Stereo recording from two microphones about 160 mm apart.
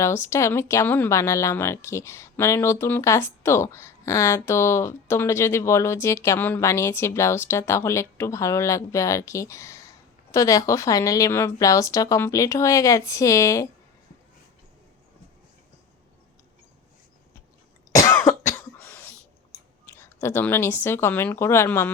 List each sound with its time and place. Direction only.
0.0 s a woman's voice: 15° left (ahead or behind)
17.9 s cough: 20° left (ahead or behind)
20.2 s a woman's voice: 15° left (ahead or behind)